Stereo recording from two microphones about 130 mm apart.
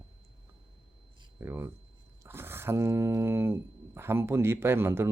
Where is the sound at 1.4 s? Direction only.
20° right (ahead or behind).